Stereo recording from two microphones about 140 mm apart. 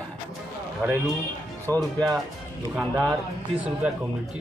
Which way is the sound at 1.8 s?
25° right (ahead or behind).